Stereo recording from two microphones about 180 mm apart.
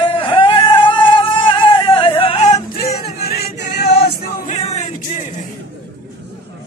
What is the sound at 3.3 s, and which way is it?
Choir, 60° left (ahead or behind).